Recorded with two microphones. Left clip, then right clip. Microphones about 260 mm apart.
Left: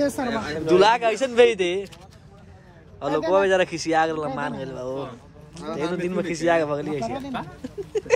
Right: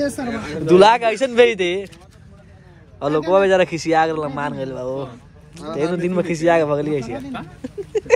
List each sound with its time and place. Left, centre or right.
0.4 s a man's voice: centre
3.0 s a man's voice: centre
7.0 s speech: left
7.9 s a sound: centre